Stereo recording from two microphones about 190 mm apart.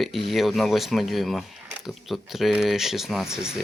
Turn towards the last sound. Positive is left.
turn(degrees=-5)  # may be behind; listen again after turning